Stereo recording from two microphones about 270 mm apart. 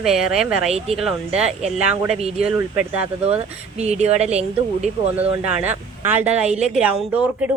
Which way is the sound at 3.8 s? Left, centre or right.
Right.